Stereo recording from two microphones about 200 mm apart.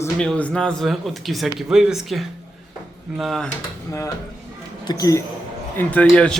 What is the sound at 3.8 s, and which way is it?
Speech, 15° left (ahead or behind).